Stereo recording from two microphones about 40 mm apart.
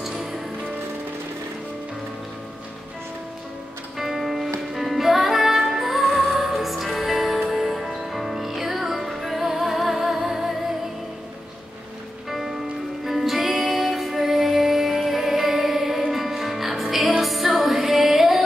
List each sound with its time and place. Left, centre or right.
0.0 s music: centre
4.0 s music: centre
12.3 s music: centre